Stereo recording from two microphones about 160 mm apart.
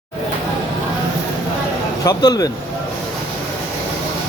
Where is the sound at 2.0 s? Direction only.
25° left (ahead or behind).